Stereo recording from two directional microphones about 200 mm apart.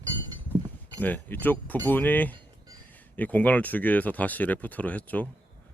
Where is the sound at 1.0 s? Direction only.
10° left (ahead or behind).